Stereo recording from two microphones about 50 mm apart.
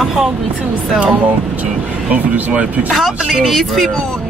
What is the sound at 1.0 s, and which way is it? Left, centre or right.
Speech, right.